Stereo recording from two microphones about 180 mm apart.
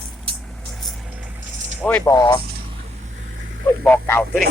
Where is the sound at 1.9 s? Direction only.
10° left (ahead or behind).